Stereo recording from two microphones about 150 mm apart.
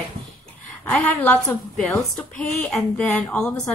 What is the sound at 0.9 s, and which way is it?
Speech, 10° left (ahead or behind).